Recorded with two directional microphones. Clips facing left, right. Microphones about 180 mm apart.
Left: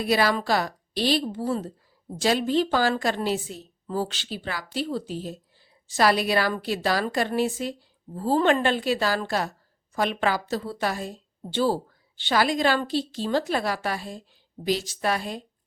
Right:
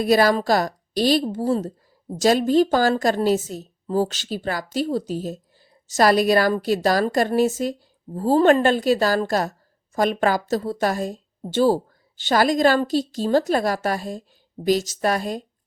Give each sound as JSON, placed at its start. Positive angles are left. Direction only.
{"t": 0.0, "sound": "a woman's voice", "side_deg": -40}